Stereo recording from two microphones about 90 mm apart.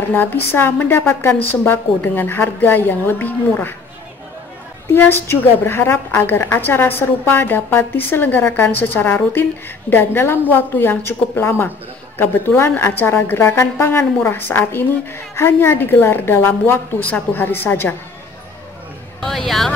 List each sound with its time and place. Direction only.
0.1 s a woman's voice: 20° left (ahead or behind)
4.9 s a woman's voice: 25° left (ahead or behind)
19.2 s a sound: 5° left (ahead or behind)